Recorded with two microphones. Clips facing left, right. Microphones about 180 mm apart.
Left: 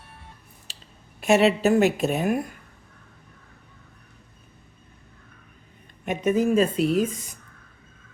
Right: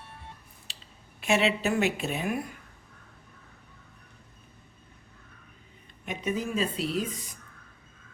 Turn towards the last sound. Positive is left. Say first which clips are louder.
# left 8 dB
turn(degrees=50)  # may be behind; listen again after turning